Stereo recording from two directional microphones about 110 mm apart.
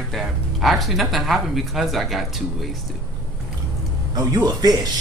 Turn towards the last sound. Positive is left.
turn(degrees=-35)  # may be behind; listen again after turning